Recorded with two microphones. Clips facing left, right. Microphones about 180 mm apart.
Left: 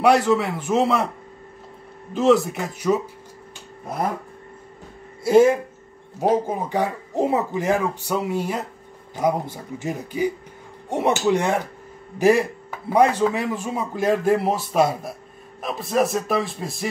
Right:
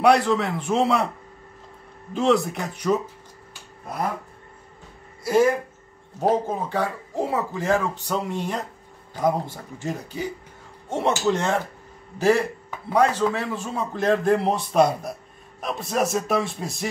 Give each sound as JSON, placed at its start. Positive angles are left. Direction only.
{"t": 0.0, "sound": "a man's voice", "side_deg": 5}
{"t": 2.1, "sound": "a man's voice", "side_deg": 0}
{"t": 5.2, "sound": "speech", "side_deg": 25}
{"t": 6.1, "sound": "a man's voice", "side_deg": 10}